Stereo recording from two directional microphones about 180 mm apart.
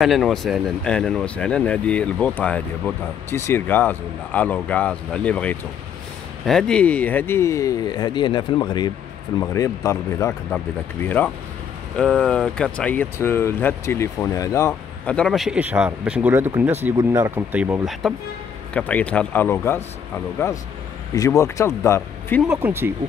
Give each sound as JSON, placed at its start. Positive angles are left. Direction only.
{"t": 0.0, "sound": "speech", "side_deg": 0}
{"t": 14.7, "sound": "speech", "side_deg": 5}
{"t": 18.0, "sound": "speech", "side_deg": 5}
{"t": 21.1, "sound": "speech", "side_deg": 20}
{"t": 22.5, "sound": "speech", "side_deg": -10}